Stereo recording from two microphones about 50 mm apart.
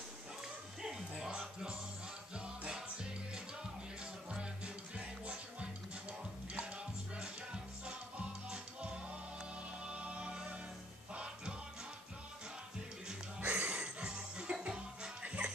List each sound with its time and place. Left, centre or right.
0.8 s music: centre
4.9 s music: right
7.2 s music: centre
9.8 s music: right
13.4 s music: right